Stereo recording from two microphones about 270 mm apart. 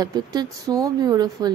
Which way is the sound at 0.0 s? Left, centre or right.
Centre.